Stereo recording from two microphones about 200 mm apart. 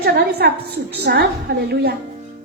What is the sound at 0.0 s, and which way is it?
Speech, 50° right (ahead or behind).